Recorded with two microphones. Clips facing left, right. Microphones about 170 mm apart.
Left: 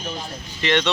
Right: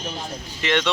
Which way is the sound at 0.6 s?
5° right (ahead or behind).